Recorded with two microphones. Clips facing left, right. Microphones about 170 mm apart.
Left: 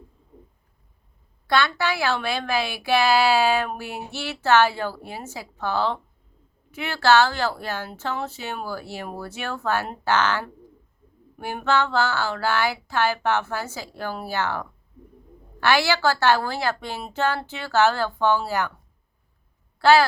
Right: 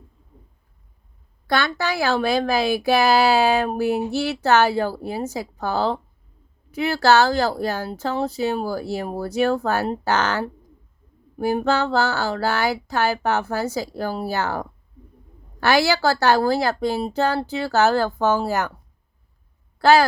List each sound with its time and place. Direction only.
1.5 s speech: 45° right (ahead or behind)
19.8 s speech: 40° right (ahead or behind)